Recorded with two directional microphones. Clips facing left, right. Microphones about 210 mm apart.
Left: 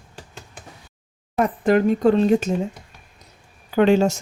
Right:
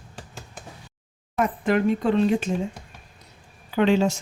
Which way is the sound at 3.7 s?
45° left (ahead or behind).